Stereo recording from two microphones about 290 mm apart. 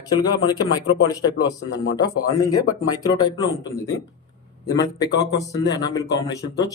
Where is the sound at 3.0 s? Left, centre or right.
Centre.